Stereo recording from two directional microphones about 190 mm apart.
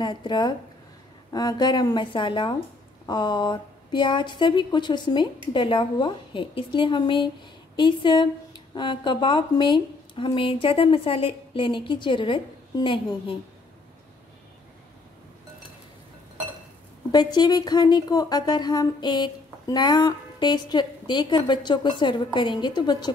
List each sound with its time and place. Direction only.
0.0 s speech: 25° left (ahead or behind)
17.1 s speech: 20° left (ahead or behind)